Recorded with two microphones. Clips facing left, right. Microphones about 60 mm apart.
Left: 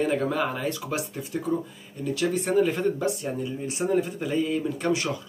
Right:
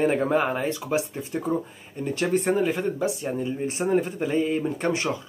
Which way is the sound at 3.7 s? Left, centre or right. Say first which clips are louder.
Even; right.